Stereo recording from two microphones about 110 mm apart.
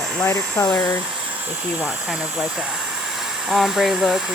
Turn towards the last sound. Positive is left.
turn(degrees=0)  # may be behind; listen again after turning